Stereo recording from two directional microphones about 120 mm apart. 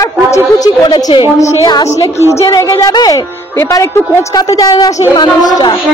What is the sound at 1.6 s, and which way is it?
A woman's voice, 35° left (ahead or behind).